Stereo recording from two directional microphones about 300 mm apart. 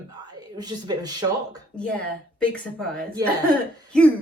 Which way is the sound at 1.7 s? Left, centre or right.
Centre.